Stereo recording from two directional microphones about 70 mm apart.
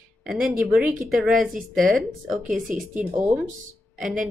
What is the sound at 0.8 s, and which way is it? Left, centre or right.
Speech, centre.